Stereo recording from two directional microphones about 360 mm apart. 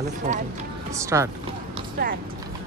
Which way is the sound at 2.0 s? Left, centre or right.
Right.